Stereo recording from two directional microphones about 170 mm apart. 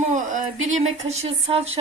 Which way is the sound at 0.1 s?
45° right (ahead or behind).